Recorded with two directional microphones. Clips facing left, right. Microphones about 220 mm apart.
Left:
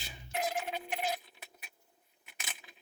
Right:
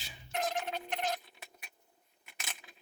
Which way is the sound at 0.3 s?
5° left (ahead or behind).